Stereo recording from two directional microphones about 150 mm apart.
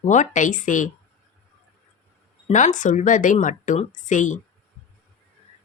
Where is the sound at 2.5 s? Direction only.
55° left (ahead or behind).